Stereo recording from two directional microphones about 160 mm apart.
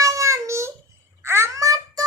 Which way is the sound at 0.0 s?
20° right (ahead or behind).